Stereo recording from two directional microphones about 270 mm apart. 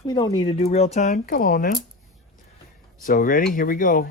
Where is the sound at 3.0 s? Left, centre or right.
Left.